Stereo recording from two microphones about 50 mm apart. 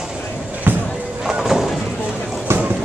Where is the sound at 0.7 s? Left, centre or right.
Right.